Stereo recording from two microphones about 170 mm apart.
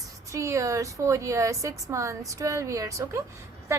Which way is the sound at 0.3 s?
20° right (ahead or behind).